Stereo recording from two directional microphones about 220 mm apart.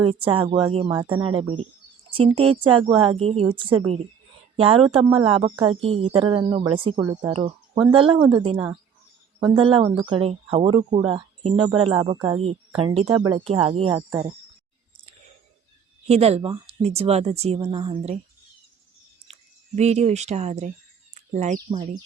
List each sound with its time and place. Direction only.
0.0 s speech: 25° right (ahead or behind)
9.6 s speech: 25° right (ahead or behind)
16.0 s speech: 30° right (ahead or behind)
19.3 s speech: 30° right (ahead or behind)